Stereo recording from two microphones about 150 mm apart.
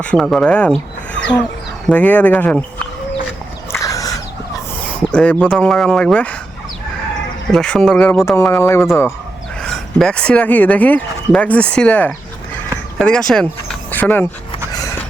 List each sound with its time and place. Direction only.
0.0 s speech: 5° left (ahead or behind)
3.7 s a sound: 25° left (ahead or behind)
4.9 s speech: 10° left (ahead or behind)
7.5 s speech: 5° left (ahead or behind)
8.2 s speech: 15° left (ahead or behind)
9.6 s speech: 5° left (ahead or behind)